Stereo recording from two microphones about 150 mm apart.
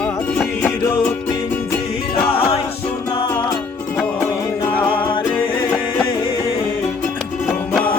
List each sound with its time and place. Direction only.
0.3 s music: 10° left (ahead or behind)
2.2 s music: 40° left (ahead or behind)